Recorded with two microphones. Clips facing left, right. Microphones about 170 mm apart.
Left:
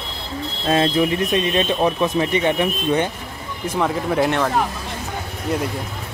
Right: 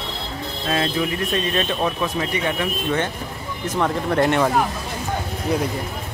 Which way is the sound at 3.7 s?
5° left (ahead or behind).